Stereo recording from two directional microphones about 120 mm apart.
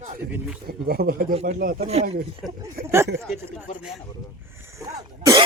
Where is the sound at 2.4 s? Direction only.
Centre (ahead or behind).